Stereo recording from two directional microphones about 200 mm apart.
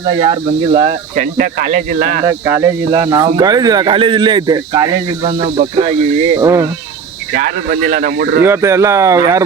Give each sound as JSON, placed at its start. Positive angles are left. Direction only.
{"t": 0.0, "sound": "speech", "side_deg": -20}
{"t": 1.1, "sound": "speech", "side_deg": -45}
{"t": 2.2, "sound": "cricket", "side_deg": -15}
{"t": 3.3, "sound": "speech", "side_deg": -20}
{"t": 6.3, "sound": "cricket", "side_deg": -15}
{"t": 7.3, "sound": "speech", "side_deg": -50}
{"t": 8.4, "sound": "cricket", "side_deg": -15}